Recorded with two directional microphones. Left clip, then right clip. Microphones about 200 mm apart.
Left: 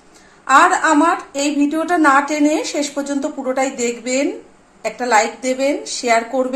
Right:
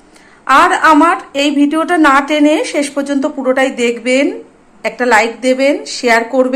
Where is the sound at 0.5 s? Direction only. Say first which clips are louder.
Right 4 dB; centre (ahead or behind).